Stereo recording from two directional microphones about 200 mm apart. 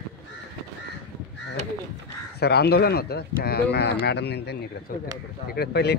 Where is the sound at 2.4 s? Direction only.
55° left (ahead or behind).